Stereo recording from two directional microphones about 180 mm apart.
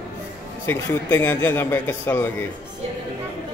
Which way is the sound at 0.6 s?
10° left (ahead or behind).